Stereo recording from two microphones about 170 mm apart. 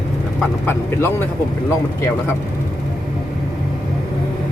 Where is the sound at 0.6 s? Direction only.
15° left (ahead or behind).